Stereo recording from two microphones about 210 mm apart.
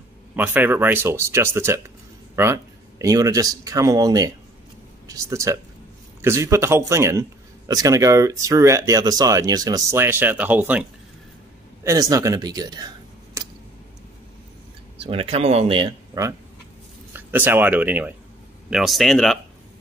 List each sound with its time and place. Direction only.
0.4 s a man's voice: 10° right (ahead or behind)
13.4 s a sound: 15° right (ahead or behind)
15.0 s speech: 25° right (ahead or behind); by 19.3 s centre (ahead or behind)